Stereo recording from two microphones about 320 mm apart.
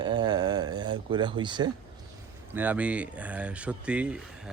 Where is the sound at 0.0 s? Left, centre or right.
Centre.